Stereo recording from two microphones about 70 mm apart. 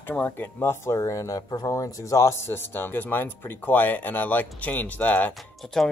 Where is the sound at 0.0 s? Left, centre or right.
Left.